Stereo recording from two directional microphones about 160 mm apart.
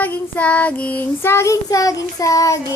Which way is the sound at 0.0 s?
10° left (ahead or behind).